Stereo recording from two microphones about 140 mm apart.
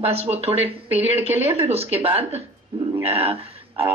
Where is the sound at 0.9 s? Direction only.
15° right (ahead or behind).